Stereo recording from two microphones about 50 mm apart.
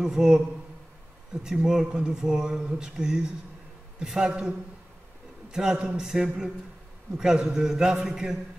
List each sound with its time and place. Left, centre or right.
0.0 s speech: centre
1.4 s speech: centre